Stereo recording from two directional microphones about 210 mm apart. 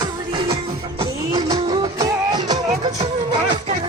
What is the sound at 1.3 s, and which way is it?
Music, 20° right (ahead or behind).